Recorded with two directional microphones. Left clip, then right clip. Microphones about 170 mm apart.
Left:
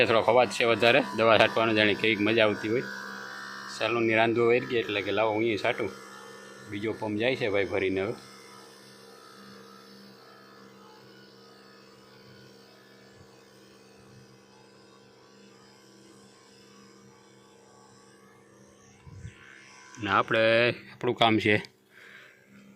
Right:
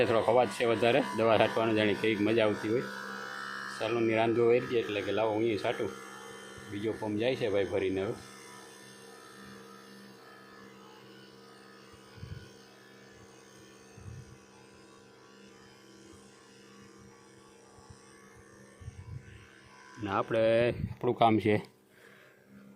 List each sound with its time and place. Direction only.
0.0 s speech: 10° left (ahead or behind)
3.0 s music: 35° right (ahead or behind)
3.8 s speech: 20° left (ahead or behind)
5.9 s music: 40° right (ahead or behind)
7.0 s speech: 25° left (ahead or behind)
8.1 s music: 40° right (ahead or behind)
20.0 s speech: 10° left (ahead or behind)